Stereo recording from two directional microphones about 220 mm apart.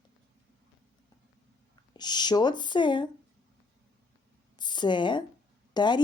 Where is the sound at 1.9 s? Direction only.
20° left (ahead or behind).